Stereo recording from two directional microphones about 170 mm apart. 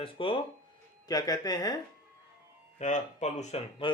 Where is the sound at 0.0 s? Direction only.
30° left (ahead or behind).